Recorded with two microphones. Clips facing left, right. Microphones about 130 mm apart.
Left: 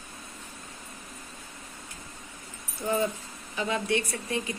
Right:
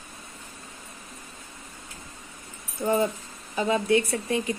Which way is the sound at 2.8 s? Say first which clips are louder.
Right 4 dB; 30° right (ahead or behind).